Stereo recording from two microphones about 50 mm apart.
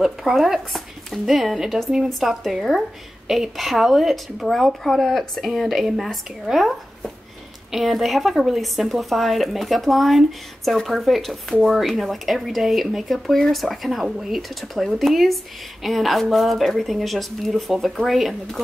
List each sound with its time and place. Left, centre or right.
0.2 s speech: centre